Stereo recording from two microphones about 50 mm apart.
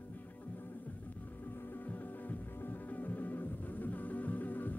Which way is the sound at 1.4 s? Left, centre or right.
Left.